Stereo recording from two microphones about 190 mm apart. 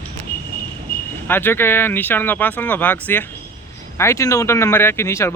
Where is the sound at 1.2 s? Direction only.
10° left (ahead or behind).